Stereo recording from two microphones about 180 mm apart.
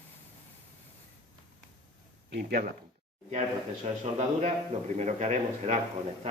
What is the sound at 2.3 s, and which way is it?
Speech, 60° right (ahead or behind).